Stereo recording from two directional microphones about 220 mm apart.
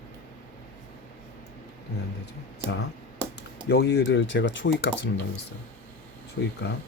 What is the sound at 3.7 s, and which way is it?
Speech, 50° left (ahead or behind).